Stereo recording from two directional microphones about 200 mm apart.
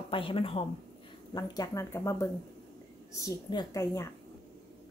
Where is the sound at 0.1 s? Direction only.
25° left (ahead or behind).